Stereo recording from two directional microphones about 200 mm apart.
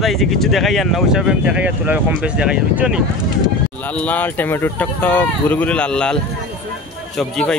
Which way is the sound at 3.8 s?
5° left (ahead or behind).